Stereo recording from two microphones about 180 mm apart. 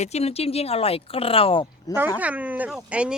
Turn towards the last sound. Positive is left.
turn(degrees=-5)  # may be behind; listen again after turning